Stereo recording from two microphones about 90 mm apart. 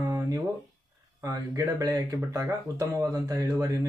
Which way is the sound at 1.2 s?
40° right (ahead or behind).